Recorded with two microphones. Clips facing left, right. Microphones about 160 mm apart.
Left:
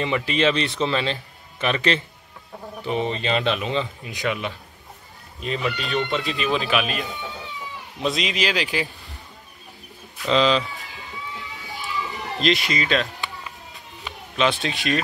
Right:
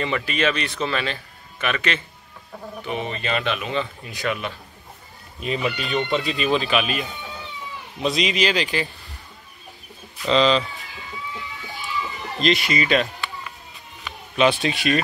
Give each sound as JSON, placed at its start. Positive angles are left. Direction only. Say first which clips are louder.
{"t": 0.0, "sound": "a man's voice", "louder": "left 2 dB", "side_deg": 20}
{"t": 5.8, "sound": "speech", "louder": "right 1 dB", "side_deg": 0}
{"t": 10.2, "sound": "speech", "louder": "right 1 dB", "side_deg": 5}
{"t": 12.4, "sound": "speech", "louder": "right 1 dB", "side_deg": 0}
{"t": 14.3, "sound": "speech", "louder": "right 3 dB", "side_deg": -5}